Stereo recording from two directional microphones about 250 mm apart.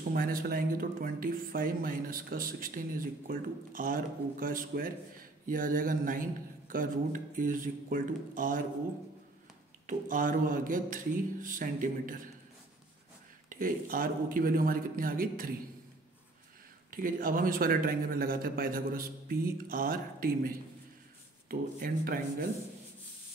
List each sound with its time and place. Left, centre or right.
0.1 s speech: right
9.8 s speech: right
13.5 s speech: right
16.9 s speech: right